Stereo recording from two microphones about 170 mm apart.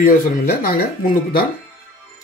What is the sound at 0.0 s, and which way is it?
Speech, 60° left (ahead or behind).